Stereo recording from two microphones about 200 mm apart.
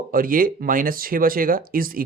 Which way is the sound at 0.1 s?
45° right (ahead or behind).